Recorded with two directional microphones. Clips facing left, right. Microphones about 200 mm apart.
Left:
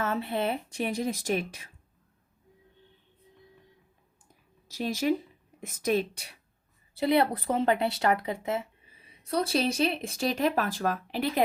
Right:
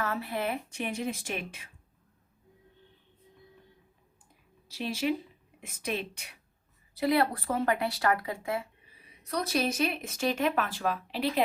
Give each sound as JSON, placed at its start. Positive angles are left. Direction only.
{"t": 0.0, "sound": "speech", "side_deg": 25}
{"t": 4.7, "sound": "speech", "side_deg": 45}
{"t": 6.9, "sound": "speech", "side_deg": 25}